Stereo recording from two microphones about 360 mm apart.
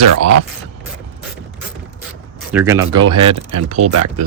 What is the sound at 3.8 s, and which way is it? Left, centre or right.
Speech, right.